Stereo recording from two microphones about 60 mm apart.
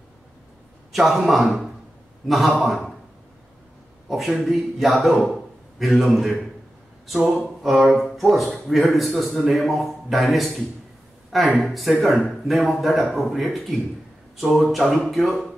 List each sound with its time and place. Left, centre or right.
0.9 s a man's voice: centre
4.1 s a man's voice: centre
7.4 s a sound: centre
8.0 s a man's voice: centre
11.6 s a man's voice: centre